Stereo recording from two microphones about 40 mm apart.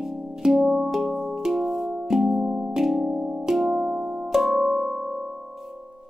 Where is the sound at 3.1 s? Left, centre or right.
Centre.